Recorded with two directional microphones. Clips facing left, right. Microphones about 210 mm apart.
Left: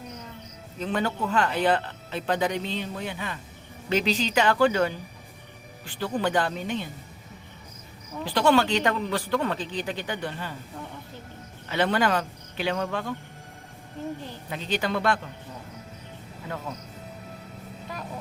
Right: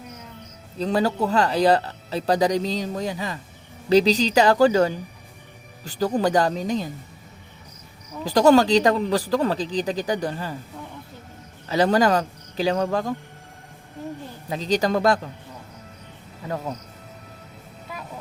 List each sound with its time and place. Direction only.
0.8 s speech: 35° right (ahead or behind)
8.2 s speech: 40° right (ahead or behind)
11.7 s speech: 40° right (ahead or behind)
14.5 s speech: 35° right (ahead or behind)